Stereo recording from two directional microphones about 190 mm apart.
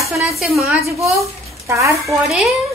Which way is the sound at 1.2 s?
15° right (ahead or behind).